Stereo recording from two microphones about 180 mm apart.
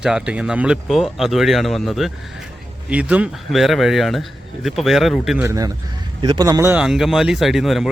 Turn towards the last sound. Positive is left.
turn(degrees=0)  # may be behind; listen again after turning